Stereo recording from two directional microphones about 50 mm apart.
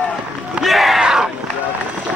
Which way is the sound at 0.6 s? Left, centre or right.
Centre.